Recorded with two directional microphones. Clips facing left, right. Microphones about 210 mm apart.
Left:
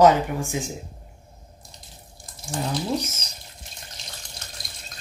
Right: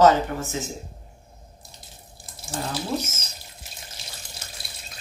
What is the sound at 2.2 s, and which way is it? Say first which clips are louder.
Water tap: left 2 dB; 5° right (ahead or behind).